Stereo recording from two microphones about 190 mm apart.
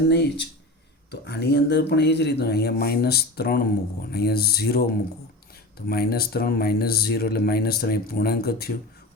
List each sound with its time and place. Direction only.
0.1 s speech: 65° left (ahead or behind)